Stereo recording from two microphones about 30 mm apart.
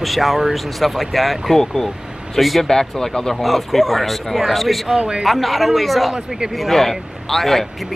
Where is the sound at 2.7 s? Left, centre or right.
Left.